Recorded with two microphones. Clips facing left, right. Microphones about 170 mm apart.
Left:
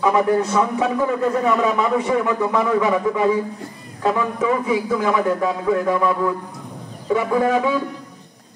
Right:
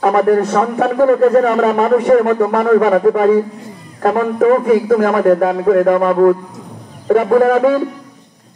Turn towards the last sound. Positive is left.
turn(degrees=-55)  # may be behind; listen again after turning